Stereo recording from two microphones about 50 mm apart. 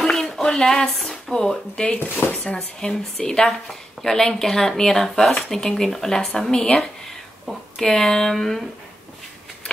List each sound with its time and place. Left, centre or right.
0.0 s a sound: centre
2.0 s speech: left
2.4 s speech: centre